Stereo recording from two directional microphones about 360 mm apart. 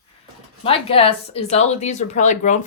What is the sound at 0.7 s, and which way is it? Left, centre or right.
Speech, centre.